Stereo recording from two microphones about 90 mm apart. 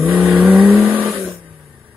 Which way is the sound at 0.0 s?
25° right (ahead or behind).